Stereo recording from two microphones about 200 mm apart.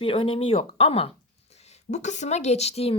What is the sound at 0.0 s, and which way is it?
A woman's voice, 25° left (ahead or behind).